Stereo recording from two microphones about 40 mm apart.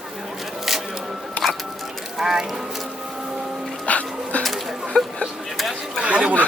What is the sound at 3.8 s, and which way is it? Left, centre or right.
Music, left.